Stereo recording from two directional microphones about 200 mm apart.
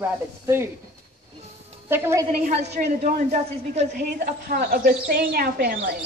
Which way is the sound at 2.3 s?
35° right (ahead or behind).